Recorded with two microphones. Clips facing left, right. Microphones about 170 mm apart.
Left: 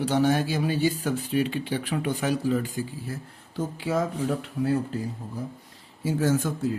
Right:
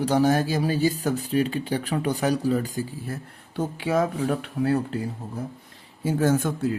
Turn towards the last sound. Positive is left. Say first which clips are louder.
# right 2 dB
turn(degrees=-55)  # may be behind; listen again after turning